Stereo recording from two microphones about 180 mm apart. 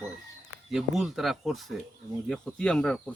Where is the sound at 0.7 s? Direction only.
Centre (ahead or behind).